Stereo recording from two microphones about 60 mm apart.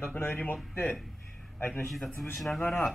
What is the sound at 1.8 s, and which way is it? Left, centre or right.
Speech, centre.